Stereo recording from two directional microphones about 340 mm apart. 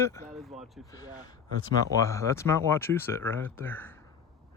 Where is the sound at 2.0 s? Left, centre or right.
Centre.